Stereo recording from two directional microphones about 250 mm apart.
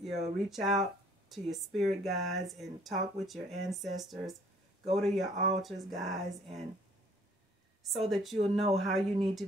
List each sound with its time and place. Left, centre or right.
0.0 s speech: centre
7.9 s speech: centre
8.4 s speech: right
8.7 s speech: centre